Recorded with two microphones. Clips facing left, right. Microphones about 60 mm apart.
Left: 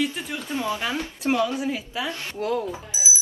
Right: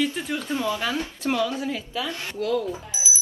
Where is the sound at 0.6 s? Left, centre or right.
Left.